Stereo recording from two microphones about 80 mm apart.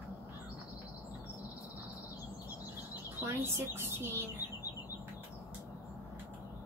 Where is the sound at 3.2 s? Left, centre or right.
Right.